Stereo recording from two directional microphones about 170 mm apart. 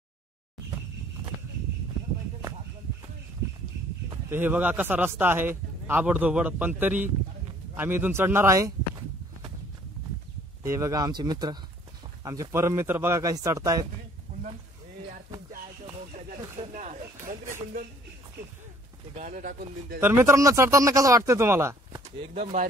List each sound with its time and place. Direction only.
4.1 s speech: 10° right (ahead or behind)
10.6 s speech: 15° right (ahead or behind)
16.1 s a sound: 50° right (ahead or behind)
19.1 s speech: 50° right (ahead or behind)
20.0 s speech: 15° right (ahead or behind)
22.2 s speech: 35° right (ahead or behind)